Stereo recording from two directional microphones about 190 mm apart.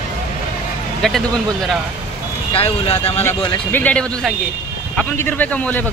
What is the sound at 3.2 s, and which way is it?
A man's voice, 10° left (ahead or behind).